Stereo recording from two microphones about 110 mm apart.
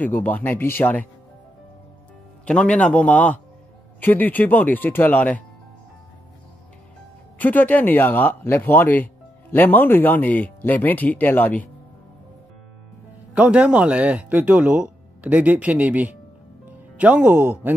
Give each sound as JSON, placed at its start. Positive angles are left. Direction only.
{"t": 0.0, "sound": "speech", "side_deg": 15}
{"t": 2.4, "sound": "speech", "side_deg": 10}
{"t": 7.3, "sound": "speech", "side_deg": 15}
{"t": 13.3, "sound": "speech", "side_deg": -10}